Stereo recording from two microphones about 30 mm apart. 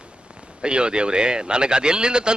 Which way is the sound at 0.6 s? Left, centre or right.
Right.